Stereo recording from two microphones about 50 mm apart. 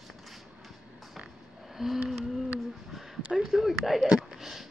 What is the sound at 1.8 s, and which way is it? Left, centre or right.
Speech, centre.